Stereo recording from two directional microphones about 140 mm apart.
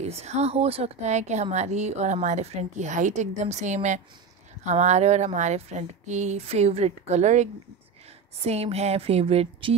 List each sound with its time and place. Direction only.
0.1 s a woman's voice: 50° right (ahead or behind)